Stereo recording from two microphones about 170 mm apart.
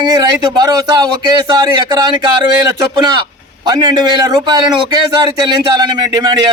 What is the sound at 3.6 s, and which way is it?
A man's voice, 25° right (ahead or behind).